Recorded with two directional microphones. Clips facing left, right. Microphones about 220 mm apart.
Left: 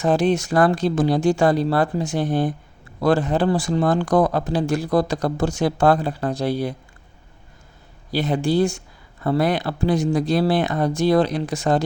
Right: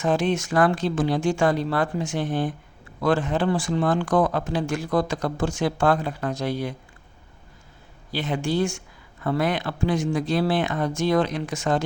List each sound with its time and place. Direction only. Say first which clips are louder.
0.0 s speech: left 4 dB; 35° left (ahead or behind)
8.1 s speech: left 5 dB; 35° left (ahead or behind)